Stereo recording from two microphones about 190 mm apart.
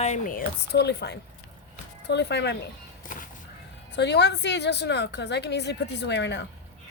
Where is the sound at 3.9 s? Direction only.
65° left (ahead or behind).